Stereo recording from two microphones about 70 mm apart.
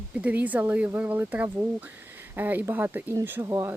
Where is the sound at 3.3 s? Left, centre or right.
Right.